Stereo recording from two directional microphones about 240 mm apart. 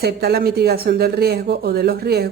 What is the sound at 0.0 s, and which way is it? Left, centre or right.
Speech, right.